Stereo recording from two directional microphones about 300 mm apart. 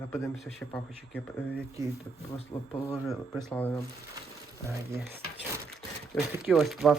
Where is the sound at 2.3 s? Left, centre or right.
Centre.